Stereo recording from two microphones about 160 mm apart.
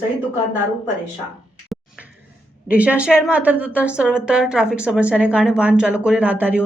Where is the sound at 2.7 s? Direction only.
10° right (ahead or behind).